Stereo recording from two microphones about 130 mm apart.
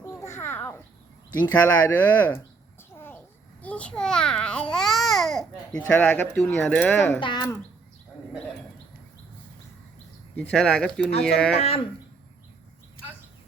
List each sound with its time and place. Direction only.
0.0 s babbling: 20° left (ahead or behind)
1.4 s speech: 15° left (ahead or behind)
3.6 s babbling: 10° left (ahead or behind)
5.9 s speech: 15° left (ahead or behind)
7.2 s speech: 35° left (ahead or behind)
10.3 s speech: 10° left (ahead or behind)
11.5 s speech: 50° left (ahead or behind)